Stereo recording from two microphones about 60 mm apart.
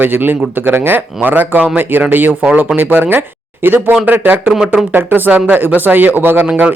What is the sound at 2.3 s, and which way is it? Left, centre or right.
Speech, right.